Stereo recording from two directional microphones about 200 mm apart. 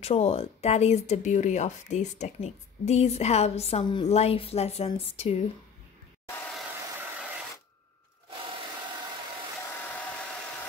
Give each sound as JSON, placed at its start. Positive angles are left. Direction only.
{"t": 0.0, "sound": "speech", "side_deg": 30}